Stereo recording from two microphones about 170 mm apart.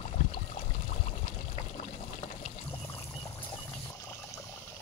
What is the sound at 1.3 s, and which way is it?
Pour, 45° left (ahead or behind).